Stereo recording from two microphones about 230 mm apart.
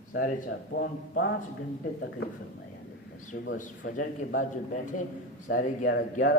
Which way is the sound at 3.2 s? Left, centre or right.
Left.